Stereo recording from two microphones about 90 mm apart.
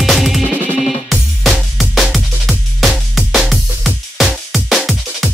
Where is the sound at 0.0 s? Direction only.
Centre (ahead or behind).